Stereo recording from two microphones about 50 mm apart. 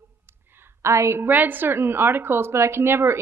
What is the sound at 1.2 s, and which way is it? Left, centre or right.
A woman's voice, right.